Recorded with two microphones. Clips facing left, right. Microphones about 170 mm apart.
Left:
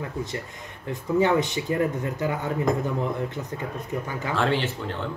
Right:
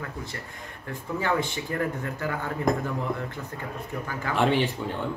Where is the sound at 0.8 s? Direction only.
20° left (ahead or behind).